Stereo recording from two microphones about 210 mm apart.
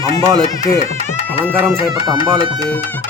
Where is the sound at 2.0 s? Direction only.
25° right (ahead or behind).